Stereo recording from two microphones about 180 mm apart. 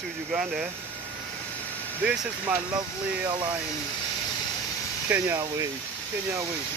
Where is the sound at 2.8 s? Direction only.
25° right (ahead or behind).